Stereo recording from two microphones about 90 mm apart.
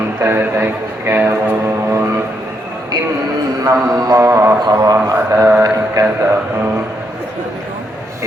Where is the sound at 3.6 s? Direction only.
40° right (ahead or behind).